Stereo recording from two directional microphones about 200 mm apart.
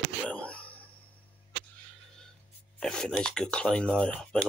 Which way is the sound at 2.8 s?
5° left (ahead or behind).